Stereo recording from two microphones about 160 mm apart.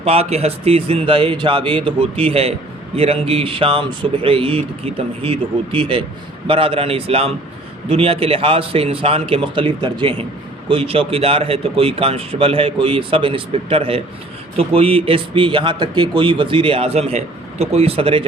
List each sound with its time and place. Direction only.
0.0 s speech: 40° right (ahead or behind)